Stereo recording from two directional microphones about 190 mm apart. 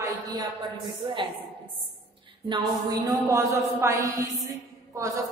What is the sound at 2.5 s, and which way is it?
A woman's voice, 20° right (ahead or behind).